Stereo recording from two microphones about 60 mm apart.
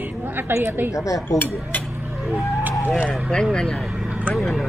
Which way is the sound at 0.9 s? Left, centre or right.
Left.